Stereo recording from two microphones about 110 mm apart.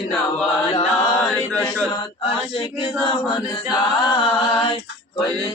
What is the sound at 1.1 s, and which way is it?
Mantra, 20° left (ahead or behind).